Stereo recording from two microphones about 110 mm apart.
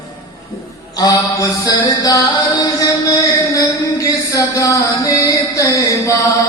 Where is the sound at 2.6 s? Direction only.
30° left (ahead or behind).